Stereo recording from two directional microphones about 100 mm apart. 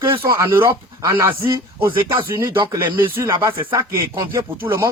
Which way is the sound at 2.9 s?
20° right (ahead or behind).